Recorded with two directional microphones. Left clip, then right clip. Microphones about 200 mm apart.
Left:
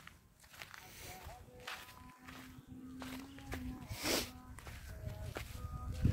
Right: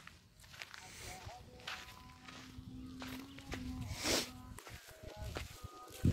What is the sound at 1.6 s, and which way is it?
Music, 15° left (ahead or behind).